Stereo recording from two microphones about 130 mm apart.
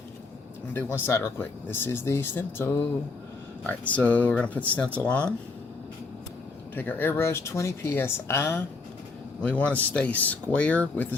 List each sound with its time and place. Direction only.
0.7 s speech: 15° left (ahead or behind)
6.7 s speech: 15° left (ahead or behind)